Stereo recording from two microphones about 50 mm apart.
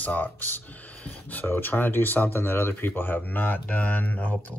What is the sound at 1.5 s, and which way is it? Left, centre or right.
Speech, left.